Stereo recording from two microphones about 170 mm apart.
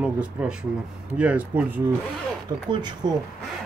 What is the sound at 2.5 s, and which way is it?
Speech, 25° right (ahead or behind).